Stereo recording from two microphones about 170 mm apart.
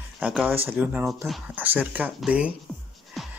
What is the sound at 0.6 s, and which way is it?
Speech, 10° right (ahead or behind).